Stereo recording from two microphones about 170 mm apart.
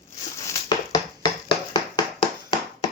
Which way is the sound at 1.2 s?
25° left (ahead or behind).